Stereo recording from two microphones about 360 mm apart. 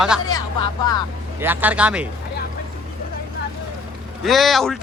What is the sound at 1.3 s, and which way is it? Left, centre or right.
Speech, centre.